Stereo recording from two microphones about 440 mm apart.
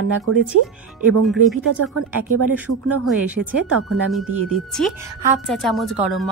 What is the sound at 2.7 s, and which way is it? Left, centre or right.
Speech, right.